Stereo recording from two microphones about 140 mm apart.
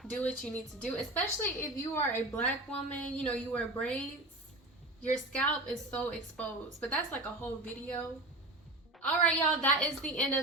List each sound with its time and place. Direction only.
0.0 s a woman's voice: 10° left (ahead or behind)
5.3 s a woman's voice: 10° left (ahead or behind)